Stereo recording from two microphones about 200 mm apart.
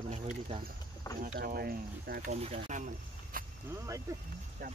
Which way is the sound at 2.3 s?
35° right (ahead or behind).